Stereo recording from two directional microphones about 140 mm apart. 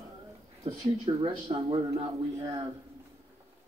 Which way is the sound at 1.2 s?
40° right (ahead or behind).